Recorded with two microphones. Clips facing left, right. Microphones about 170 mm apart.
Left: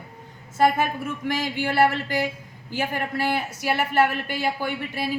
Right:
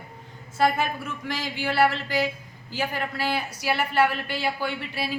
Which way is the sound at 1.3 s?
50° left (ahead or behind).